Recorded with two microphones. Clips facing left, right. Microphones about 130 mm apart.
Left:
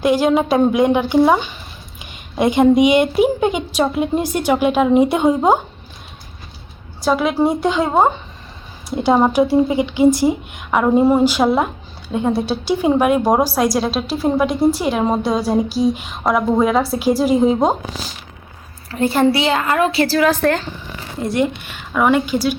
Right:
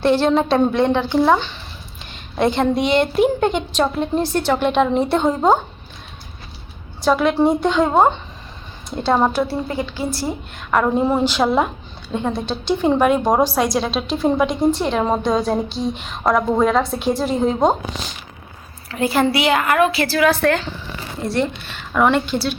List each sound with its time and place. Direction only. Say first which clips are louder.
0.0 s a woman's voice: left 1 dB; 10° left (ahead or behind)
7.0 s a woman's voice: even; 5° left (ahead or behind)
18.9 s a woman's voice: left 3 dB; 35° left (ahead or behind)
20.3 s a woman's voice: left 1 dB; 5° left (ahead or behind)